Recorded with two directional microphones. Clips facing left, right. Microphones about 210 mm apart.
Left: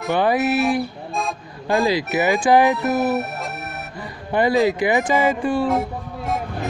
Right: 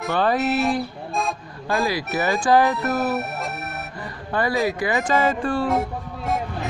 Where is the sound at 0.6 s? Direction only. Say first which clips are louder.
Left 2 dB; centre (ahead or behind).